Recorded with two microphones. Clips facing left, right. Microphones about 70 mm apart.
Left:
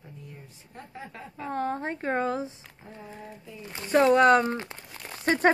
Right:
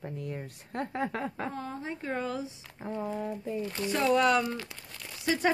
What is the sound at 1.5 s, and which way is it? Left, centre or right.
Speech, left.